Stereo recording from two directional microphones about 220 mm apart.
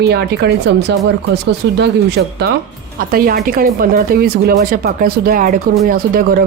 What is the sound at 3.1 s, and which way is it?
Speech, 40° right (ahead or behind).